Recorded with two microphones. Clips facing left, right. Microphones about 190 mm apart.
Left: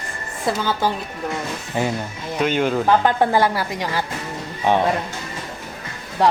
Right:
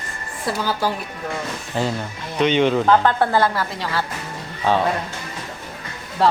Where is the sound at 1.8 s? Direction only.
15° left (ahead or behind).